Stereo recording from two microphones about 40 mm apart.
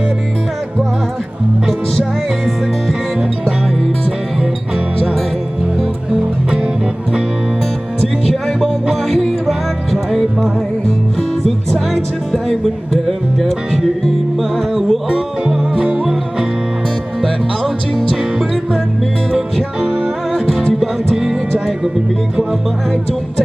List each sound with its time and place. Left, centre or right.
8.3 s music: centre
9.5 s music: centre
14.3 s music: centre
15.8 s music: right
18.2 s music: centre
19.8 s music: right